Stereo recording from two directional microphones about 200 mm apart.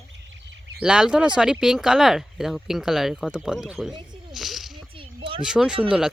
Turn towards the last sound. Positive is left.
turn(degrees=-5)  # may be behind; listen again after turning